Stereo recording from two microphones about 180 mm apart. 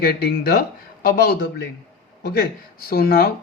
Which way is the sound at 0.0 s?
60° left (ahead or behind).